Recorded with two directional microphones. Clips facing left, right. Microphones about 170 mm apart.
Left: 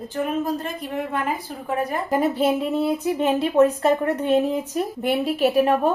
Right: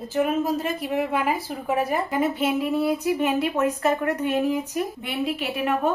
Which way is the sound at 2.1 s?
35° left (ahead or behind).